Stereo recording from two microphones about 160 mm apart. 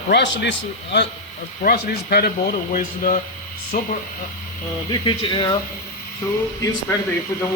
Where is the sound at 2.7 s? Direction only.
55° left (ahead or behind).